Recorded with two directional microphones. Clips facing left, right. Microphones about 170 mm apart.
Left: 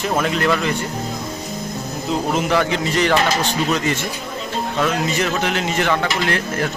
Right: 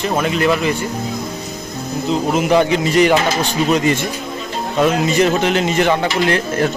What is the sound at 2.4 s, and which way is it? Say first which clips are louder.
Speech: right 6 dB; 20° right (ahead or behind).